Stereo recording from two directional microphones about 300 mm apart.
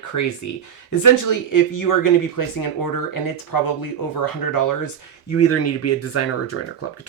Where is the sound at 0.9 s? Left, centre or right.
Left.